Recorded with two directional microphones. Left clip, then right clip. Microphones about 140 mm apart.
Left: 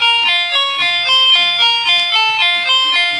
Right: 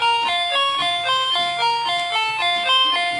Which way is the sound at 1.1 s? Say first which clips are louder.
Left 9 dB; 35° right (ahead or behind).